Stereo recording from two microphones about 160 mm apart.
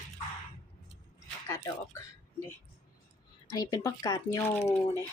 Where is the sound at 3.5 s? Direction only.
25° left (ahead or behind).